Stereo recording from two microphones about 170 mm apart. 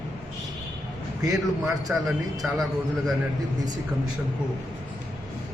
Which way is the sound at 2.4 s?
Centre (ahead or behind).